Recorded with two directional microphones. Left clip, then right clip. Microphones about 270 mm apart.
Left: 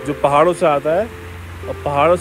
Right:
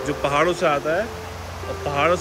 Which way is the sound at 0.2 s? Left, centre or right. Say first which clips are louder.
Left 7 dB; centre.